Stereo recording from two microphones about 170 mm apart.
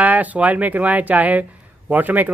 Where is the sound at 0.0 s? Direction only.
10° right (ahead or behind).